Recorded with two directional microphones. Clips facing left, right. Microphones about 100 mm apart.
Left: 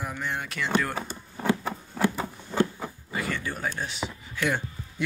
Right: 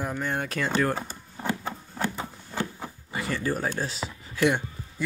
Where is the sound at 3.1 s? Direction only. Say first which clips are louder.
Right 3 dB; 25° right (ahead or behind).